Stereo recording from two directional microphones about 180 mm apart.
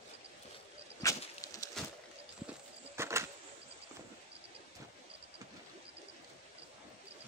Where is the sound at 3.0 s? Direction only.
15° right (ahead or behind).